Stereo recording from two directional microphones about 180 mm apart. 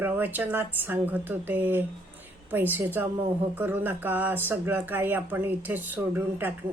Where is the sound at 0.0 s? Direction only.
10° right (ahead or behind).